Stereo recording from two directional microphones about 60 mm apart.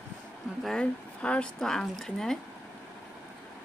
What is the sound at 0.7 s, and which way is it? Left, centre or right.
Speech, centre.